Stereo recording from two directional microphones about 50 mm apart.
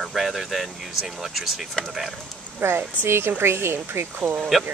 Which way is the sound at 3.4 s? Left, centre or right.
Right.